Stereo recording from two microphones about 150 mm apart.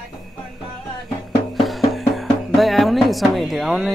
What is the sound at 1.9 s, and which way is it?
Speech, centre (ahead or behind).